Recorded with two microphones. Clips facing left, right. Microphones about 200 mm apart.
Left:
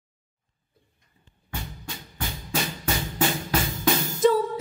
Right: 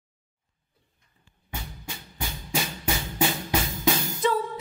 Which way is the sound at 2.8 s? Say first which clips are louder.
Even; 10° right (ahead or behind).